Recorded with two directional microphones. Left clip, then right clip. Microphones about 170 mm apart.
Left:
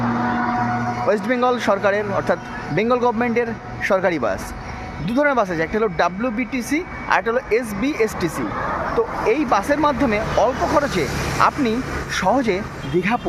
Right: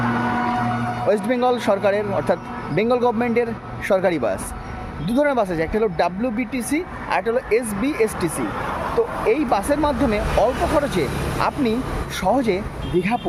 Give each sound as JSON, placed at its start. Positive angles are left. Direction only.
{"t": 0.3, "sound": "music", "side_deg": -50}
{"t": 1.0, "sound": "a man's voice", "side_deg": -5}
{"t": 11.0, "sound": "speech", "side_deg": -50}
{"t": 11.3, "sound": "a man's voice", "side_deg": 0}